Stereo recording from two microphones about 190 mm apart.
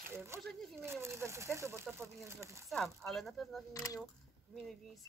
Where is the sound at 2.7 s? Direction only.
Centre (ahead or behind).